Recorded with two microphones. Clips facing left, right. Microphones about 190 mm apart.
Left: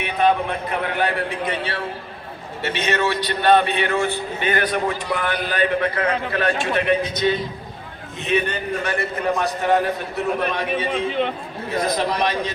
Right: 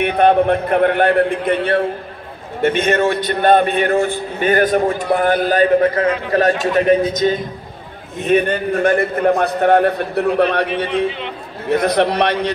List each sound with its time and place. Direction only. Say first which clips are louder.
0.0 s a man's voice: right 7 dB; 60° right (ahead or behind)